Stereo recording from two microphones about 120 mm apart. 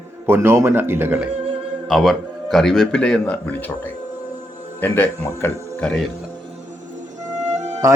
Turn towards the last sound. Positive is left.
turn(degrees=-75)  # may be behind; listen again after turning